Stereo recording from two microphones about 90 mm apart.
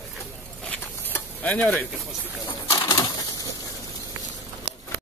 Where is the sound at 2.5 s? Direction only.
30° left (ahead or behind).